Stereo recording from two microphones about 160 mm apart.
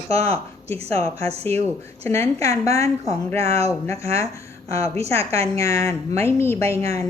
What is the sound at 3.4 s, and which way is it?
Speech, 40° right (ahead or behind).